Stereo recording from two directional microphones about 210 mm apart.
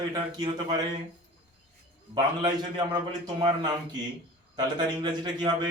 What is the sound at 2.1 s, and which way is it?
A man's voice, 20° right (ahead or behind).